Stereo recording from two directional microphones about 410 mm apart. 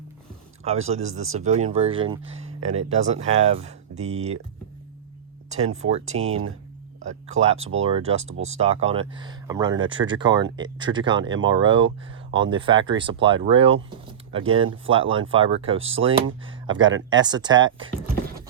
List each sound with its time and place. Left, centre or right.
0.6 s speech: centre
5.7 s speech: centre
14.8 s speech: centre
16.2 s speech: right
16.6 s speech: centre
17.8 s a sound: centre